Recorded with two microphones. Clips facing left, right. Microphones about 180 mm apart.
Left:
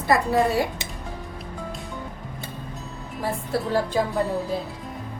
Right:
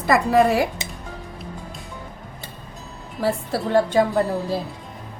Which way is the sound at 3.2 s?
80° right.